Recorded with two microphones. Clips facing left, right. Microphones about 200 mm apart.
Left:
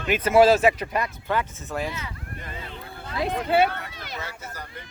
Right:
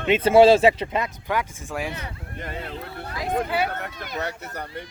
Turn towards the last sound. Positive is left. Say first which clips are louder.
# right 7 dB
turn(degrees=-35)  # may be behind; listen again after turning